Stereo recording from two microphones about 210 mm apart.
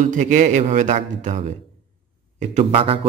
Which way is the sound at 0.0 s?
35° right (ahead or behind).